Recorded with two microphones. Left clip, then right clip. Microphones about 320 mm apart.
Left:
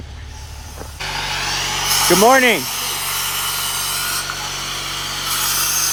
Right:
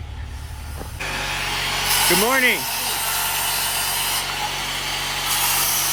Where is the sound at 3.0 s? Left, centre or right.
Right.